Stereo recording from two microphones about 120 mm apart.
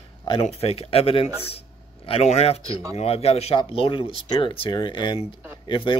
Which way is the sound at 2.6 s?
25° right (ahead or behind).